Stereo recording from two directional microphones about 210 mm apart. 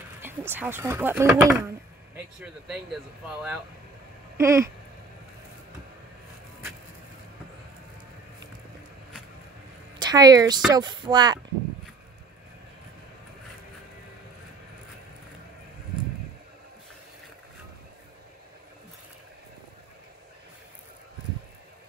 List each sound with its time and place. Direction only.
0.2 s speech: 10° right (ahead or behind)
4.4 s speech: 15° right (ahead or behind)
9.9 s a woman's voice: 20° right (ahead or behind)